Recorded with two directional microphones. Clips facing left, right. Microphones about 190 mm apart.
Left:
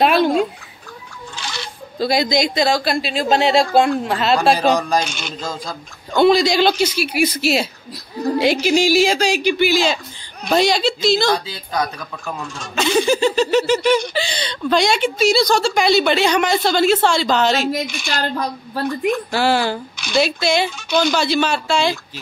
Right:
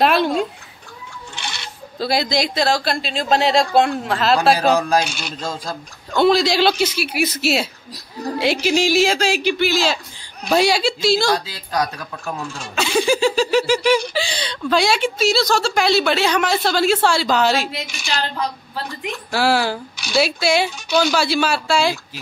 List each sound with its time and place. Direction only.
0.0 s a sound: centre (ahead or behind)
2.0 s speech: centre (ahead or behind)
17.6 s a woman's voice: 45° left (ahead or behind)
19.3 s speech: 5° right (ahead or behind)